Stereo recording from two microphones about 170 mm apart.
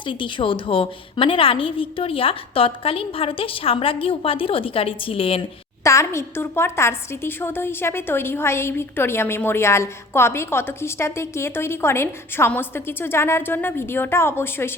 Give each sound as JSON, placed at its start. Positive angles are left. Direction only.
{"t": 0.0, "sound": "a woman's voice", "side_deg": 30}
{"t": 5.8, "sound": "a woman's voice", "side_deg": 15}